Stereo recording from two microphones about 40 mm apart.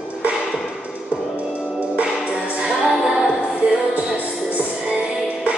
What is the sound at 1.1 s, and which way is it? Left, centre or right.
Music, right.